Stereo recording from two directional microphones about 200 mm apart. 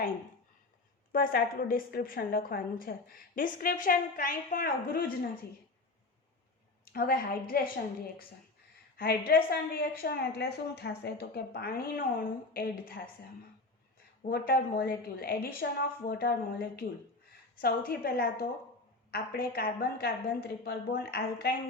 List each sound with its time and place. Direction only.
1.1 s a woman's voice: 45° left (ahead or behind)
6.9 s a woman's voice: 50° left (ahead or behind)
9.0 s a woman's voice: 50° left (ahead or behind)
14.3 s a woman's voice: 50° left (ahead or behind)